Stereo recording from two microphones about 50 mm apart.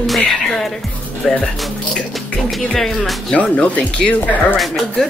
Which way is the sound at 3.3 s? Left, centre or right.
Left.